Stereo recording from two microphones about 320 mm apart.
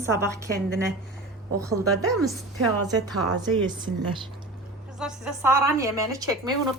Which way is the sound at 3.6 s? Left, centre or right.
Centre.